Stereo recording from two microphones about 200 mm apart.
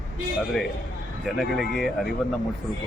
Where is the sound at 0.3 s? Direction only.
Centre (ahead or behind).